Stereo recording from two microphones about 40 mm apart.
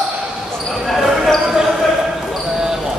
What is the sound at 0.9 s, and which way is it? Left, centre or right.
Basketball bounce, centre.